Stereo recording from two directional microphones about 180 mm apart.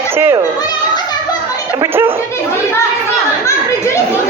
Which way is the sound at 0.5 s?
20° left (ahead or behind).